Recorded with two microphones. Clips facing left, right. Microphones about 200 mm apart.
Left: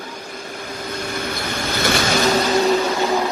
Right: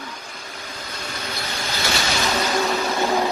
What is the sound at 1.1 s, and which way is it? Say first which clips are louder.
Vehicle: left 3 dB; 55° left (ahead or behind).